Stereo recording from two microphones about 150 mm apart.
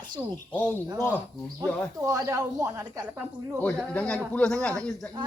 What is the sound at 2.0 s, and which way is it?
Speech, 20° right (ahead or behind).